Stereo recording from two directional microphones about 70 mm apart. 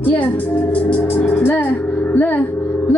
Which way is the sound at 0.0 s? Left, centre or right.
Left.